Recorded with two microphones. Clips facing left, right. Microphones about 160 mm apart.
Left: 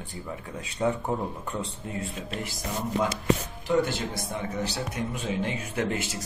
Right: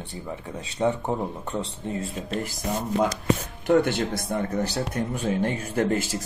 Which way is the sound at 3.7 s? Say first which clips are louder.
Right 5 dB; 60° right (ahead or behind).